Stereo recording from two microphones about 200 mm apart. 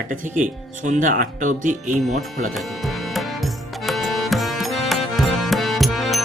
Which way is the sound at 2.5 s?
Centre (ahead or behind).